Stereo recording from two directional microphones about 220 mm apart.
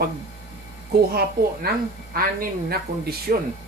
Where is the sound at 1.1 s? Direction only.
45° right (ahead or behind).